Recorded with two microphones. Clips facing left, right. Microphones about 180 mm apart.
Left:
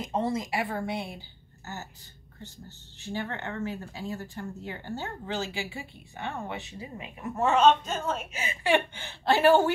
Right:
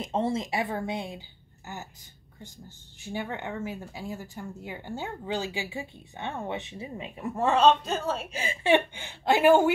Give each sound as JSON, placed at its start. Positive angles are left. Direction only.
{"t": 0.0, "sound": "a woman's voice", "side_deg": -25}
{"t": 3.0, "sound": "speech", "side_deg": -15}
{"t": 7.5, "sound": "a woman's voice", "side_deg": -35}